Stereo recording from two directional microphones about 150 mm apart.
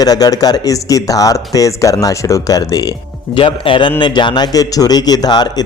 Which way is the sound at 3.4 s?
35° left (ahead or behind).